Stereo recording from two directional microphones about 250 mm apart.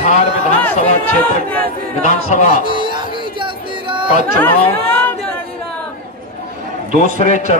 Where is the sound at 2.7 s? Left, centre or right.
Centre.